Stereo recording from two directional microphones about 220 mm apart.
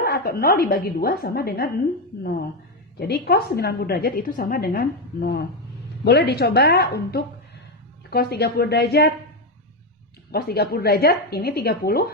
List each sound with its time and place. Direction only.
0.0 s a woman's voice: 45° left (ahead or behind)
3.0 s a woman's voice: 45° left (ahead or behind)
10.3 s a woman's voice: 45° left (ahead or behind)